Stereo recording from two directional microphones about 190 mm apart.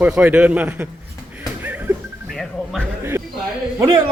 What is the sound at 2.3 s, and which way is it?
Music, centre (ahead or behind).